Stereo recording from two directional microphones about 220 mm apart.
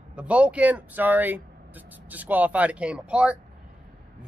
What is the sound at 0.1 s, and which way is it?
Speech, 5° right (ahead or behind).